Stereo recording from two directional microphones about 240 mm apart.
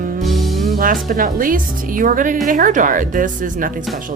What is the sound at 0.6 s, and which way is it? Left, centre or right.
Speech, right.